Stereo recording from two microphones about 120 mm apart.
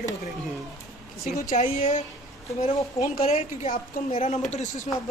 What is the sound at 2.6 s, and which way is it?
Speech, 75° left (ahead or behind).